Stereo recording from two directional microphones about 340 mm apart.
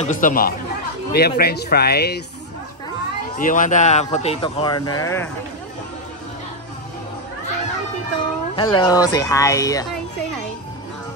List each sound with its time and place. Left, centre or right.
0.0 s speech: left
3.3 s speech: left
8.5 s speech: centre